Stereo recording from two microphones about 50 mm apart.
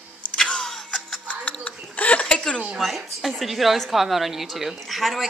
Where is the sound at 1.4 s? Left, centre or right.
Left.